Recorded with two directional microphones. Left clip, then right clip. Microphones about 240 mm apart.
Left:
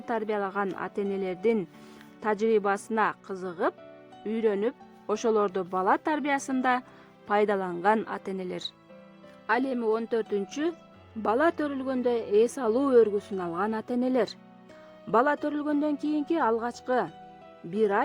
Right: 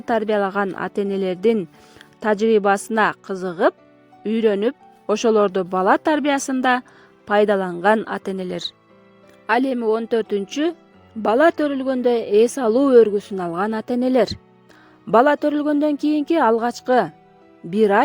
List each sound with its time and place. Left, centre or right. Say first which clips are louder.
0.0 s a woman's voice: right 10 dB; right